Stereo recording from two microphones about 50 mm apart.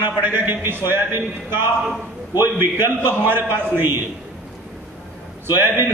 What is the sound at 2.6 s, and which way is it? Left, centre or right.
A man's voice, right.